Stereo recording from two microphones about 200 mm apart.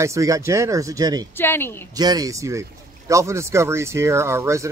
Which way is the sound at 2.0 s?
20° right (ahead or behind).